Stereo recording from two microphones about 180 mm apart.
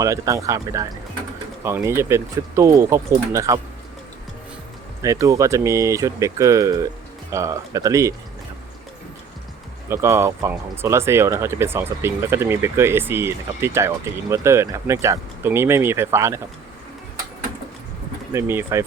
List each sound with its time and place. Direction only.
0.0 s speech: 15° right (ahead or behind)
5.0 s speech: 15° right (ahead or behind)
9.9 s speech: 15° right (ahead or behind)
18.3 s speech: 15° right (ahead or behind)